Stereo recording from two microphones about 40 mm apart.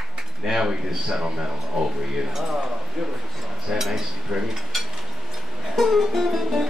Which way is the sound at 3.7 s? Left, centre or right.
Centre.